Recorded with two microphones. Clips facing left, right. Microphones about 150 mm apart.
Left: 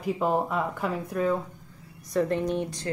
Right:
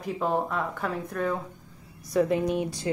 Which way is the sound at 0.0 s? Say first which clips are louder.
Left 2 dB; 5° left (ahead or behind).